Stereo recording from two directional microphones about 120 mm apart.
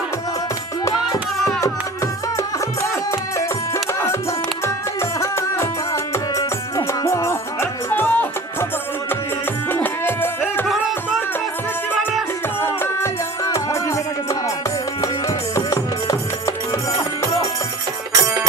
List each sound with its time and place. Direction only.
2.8 s music: 25° left (ahead or behind)
6.3 s music: 25° left (ahead or behind)
9.7 s music: 20° left (ahead or behind)
12.6 s music: 20° left (ahead or behind)
15.5 s music: 25° left (ahead or behind)